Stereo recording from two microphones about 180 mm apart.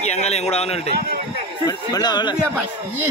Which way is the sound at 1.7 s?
20° left (ahead or behind).